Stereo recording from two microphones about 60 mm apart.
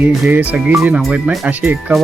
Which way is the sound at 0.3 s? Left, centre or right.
Right.